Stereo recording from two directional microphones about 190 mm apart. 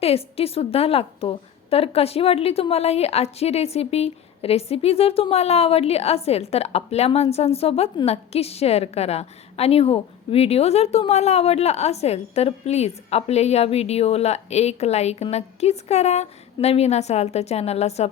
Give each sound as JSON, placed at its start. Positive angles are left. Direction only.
{"t": 0.0, "sound": "a woman's voice", "side_deg": 30}